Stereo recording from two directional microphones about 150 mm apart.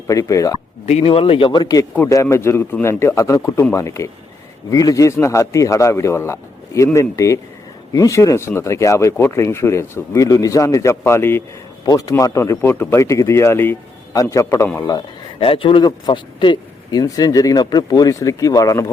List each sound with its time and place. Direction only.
0.1 s speech: 20° left (ahead or behind)
0.9 s a man's voice: 45° left (ahead or behind); by 15.0 s 25° left (ahead or behind)
15.4 s speech: 35° left (ahead or behind)